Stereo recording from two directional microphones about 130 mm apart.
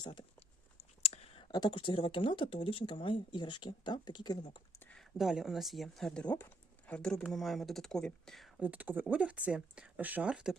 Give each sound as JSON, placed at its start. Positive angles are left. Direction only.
{"t": 0.0, "sound": "speech", "side_deg": 35}
{"t": 0.3, "sound": "speech", "side_deg": 50}
{"t": 4.8, "sound": "a sound", "side_deg": 10}
{"t": 5.1, "sound": "speech", "side_deg": -5}
{"t": 8.6, "sound": "speech", "side_deg": -10}